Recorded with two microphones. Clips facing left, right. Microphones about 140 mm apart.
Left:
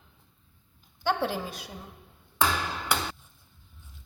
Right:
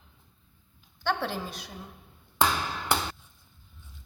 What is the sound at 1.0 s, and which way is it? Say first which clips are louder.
Speech: left 2 dB; 5° left (ahead or behind).